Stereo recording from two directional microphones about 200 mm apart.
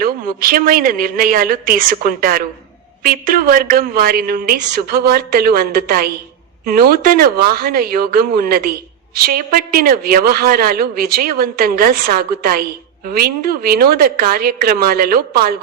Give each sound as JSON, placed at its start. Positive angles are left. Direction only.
{"t": 0.0, "sound": "speech", "side_deg": -45}